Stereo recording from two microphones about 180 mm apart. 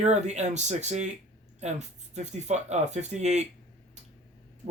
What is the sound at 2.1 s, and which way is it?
Speech, 40° right (ahead or behind).